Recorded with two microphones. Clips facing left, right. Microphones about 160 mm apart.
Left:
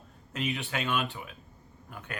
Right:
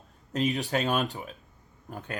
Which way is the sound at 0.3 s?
40° right (ahead or behind).